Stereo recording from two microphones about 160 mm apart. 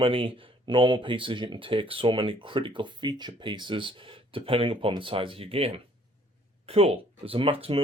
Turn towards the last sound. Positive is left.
turn(degrees=-35)  # may be behind; listen again after turning